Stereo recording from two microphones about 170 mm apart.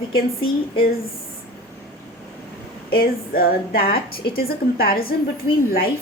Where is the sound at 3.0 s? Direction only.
65° left (ahead or behind).